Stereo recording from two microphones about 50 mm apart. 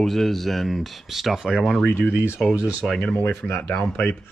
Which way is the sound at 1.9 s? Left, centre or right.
Left.